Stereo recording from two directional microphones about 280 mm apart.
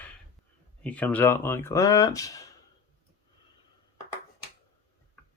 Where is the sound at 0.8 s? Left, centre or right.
Centre.